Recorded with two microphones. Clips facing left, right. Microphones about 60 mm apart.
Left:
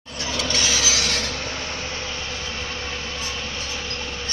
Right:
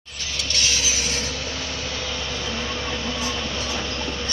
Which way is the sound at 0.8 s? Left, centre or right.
Left.